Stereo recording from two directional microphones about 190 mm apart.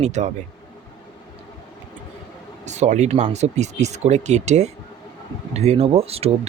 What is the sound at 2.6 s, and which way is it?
Speech, 40° right (ahead or behind).